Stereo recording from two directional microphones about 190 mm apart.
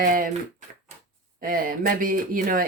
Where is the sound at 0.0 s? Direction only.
45° right (ahead or behind).